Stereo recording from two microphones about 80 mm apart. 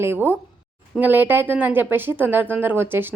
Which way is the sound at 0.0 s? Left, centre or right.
Right.